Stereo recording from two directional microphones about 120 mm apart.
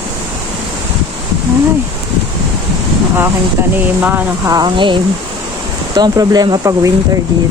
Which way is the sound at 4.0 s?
15° right (ahead or behind).